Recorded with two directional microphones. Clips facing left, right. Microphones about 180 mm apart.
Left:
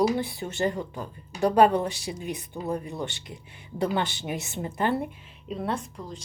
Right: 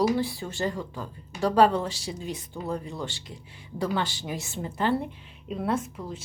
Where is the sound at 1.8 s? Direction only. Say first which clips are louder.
Left 2 dB; 60° left (ahead or behind).